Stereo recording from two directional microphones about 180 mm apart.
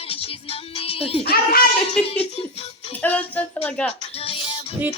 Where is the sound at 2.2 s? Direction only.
35° left (ahead or behind).